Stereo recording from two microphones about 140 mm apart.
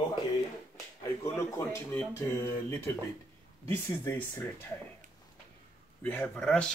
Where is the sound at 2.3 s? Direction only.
20° left (ahead or behind).